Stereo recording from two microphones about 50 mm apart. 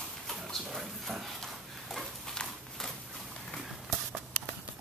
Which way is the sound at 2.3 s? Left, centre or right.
Centre.